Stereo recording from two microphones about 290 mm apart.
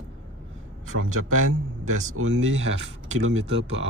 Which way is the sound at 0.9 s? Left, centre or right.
Right.